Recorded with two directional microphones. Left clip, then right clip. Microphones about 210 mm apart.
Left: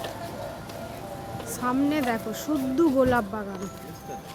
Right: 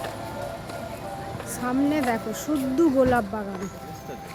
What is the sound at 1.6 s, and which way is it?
Speech, 5° right (ahead or behind).